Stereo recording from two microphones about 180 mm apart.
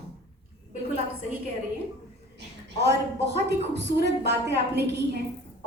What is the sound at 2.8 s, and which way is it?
A woman's voice, 70° right (ahead or behind).